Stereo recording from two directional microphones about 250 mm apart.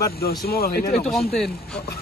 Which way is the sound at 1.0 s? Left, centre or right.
Centre.